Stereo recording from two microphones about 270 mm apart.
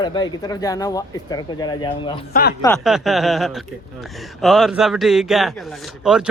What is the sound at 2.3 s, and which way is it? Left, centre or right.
Speech, left.